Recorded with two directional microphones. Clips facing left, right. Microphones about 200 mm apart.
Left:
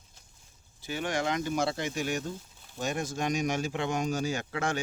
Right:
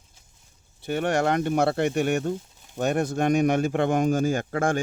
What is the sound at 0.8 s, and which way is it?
Speech, 60° right (ahead or behind).